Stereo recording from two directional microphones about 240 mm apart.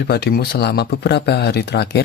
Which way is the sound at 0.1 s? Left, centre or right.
Left.